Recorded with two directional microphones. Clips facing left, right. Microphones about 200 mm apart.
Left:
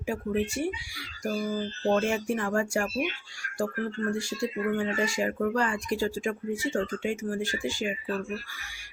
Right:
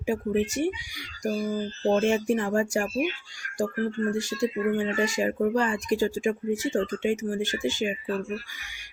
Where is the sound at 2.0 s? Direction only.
20° right (ahead or behind).